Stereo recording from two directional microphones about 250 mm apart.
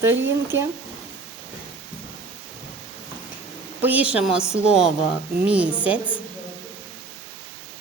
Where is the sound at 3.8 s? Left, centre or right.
Centre.